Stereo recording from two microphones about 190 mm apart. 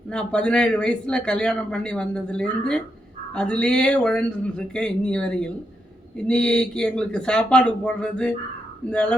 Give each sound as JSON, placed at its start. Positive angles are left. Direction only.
{"t": 0.1, "sound": "a man's voice", "side_deg": 5}